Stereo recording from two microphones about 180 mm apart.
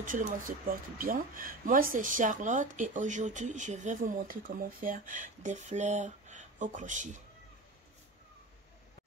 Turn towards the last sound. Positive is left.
turn(degrees=-45)  # may be behind; listen again after turning